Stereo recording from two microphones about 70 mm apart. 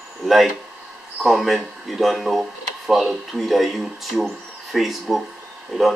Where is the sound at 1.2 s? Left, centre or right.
Centre.